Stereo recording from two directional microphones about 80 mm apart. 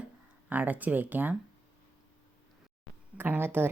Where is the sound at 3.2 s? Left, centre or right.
Right.